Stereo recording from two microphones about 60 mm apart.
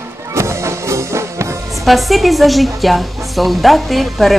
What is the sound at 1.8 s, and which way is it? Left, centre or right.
A woman's voice, centre.